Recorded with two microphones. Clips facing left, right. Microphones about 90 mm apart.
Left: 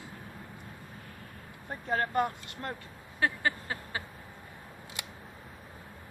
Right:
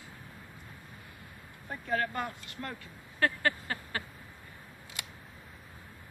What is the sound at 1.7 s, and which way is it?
Speech, 35° left (ahead or behind).